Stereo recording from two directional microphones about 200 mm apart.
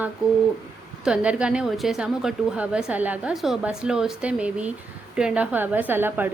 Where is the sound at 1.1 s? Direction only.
5° right (ahead or behind).